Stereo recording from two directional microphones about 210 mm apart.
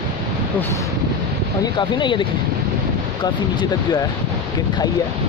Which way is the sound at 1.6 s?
20° left (ahead or behind).